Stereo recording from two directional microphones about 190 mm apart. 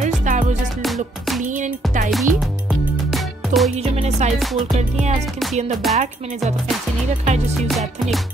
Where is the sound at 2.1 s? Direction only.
Centre (ahead or behind).